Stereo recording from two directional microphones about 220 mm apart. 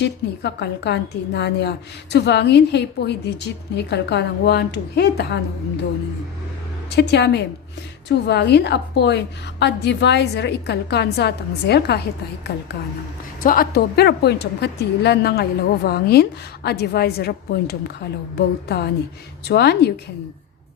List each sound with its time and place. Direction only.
0.0 s a woman's voice: 50° left (ahead or behind)
6.9 s a woman's voice: 50° left (ahead or behind)